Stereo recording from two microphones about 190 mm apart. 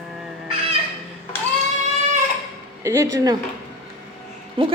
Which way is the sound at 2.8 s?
15° right (ahead or behind).